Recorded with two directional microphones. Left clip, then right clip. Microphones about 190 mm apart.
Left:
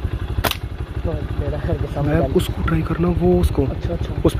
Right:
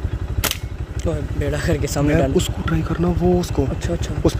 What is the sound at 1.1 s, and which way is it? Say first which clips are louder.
Speech: right 3 dB; 90° right.